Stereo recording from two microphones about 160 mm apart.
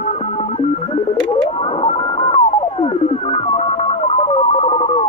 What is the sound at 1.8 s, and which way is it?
Radio, 40° left (ahead or behind).